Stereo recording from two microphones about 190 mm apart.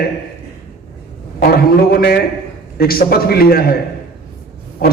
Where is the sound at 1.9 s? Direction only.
50° left (ahead or behind).